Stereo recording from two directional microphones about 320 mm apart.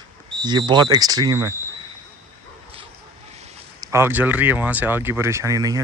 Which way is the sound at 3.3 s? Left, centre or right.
Centre.